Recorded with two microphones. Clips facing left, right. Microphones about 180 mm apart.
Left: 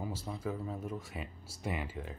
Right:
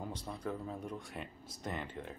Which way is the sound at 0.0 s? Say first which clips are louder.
Left 2 dB; 5° left (ahead or behind).